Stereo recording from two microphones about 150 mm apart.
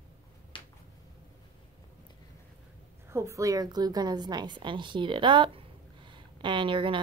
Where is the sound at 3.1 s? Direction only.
20° right (ahead or behind).